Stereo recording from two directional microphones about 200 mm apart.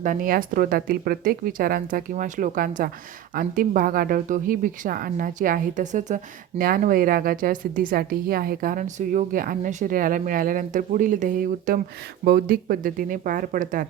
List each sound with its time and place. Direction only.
0.0 s a woman's voice: 45° right (ahead or behind)